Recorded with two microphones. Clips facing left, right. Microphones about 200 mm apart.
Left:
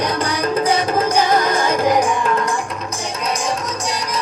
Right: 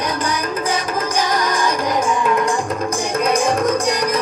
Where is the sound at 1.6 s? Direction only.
55° left (ahead or behind).